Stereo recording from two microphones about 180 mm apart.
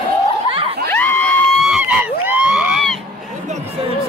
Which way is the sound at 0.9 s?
10° left (ahead or behind).